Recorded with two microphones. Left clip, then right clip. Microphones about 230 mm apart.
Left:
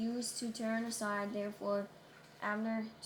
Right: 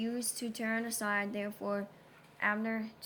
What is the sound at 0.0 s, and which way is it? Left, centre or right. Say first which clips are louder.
Speech: right 2 dB; right.